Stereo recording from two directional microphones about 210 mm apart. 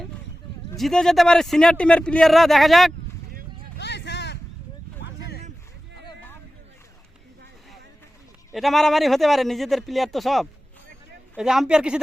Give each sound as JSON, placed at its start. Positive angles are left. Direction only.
{"t": 0.8, "sound": "speech", "side_deg": 0}
{"t": 3.8, "sound": "vehicle", "side_deg": 55}
{"t": 5.0, "sound": "a sound", "side_deg": 55}
{"t": 8.5, "sound": "speech", "side_deg": 0}